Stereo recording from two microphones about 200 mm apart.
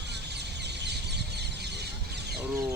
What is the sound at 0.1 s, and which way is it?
Bird, 55° right (ahead or behind).